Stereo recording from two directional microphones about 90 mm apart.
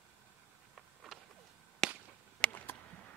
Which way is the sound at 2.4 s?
20° left (ahead or behind).